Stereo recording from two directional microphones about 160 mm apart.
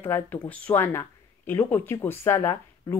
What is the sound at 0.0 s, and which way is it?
Speech, 10° left (ahead or behind).